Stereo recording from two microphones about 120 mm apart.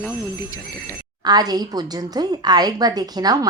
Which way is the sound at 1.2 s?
35° right (ahead or behind).